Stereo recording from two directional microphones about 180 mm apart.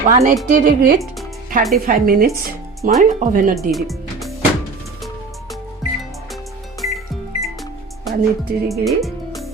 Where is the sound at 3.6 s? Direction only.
Centre (ahead or behind).